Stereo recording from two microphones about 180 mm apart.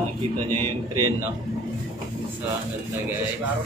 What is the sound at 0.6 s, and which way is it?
Speech, 20° right (ahead or behind).